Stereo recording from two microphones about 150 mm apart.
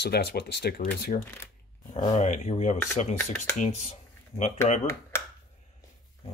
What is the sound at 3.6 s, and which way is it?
Speech, 50° left (ahead or behind).